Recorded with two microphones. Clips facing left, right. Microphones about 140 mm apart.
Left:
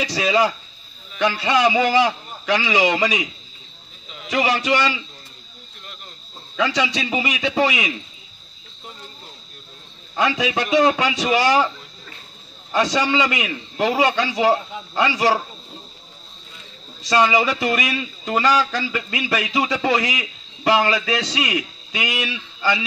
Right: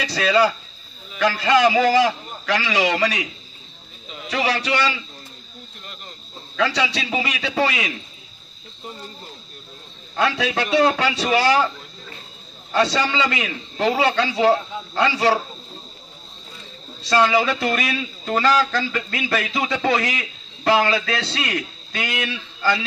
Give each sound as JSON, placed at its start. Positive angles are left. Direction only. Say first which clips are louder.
{"t": 0.1, "sound": "a man's voice", "louder": "right 3 dB", "side_deg": 15}
{"t": 4.3, "sound": "a man's voice", "louder": "left 3 dB", "side_deg": 20}
{"t": 6.5, "sound": "a man's voice", "louder": "even", "side_deg": 15}
{"t": 10.1, "sound": "a man's voice", "louder": "left 1 dB", "side_deg": 15}
{"t": 12.7, "sound": "a man's voice", "louder": "left 1 dB", "side_deg": 15}
{"t": 17.0, "sound": "a man's voice", "louder": "even", "side_deg": 10}